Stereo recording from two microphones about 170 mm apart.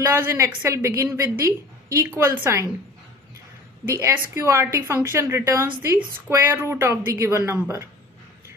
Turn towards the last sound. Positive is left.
turn(degrees=-15)  # may be behind; listen again after turning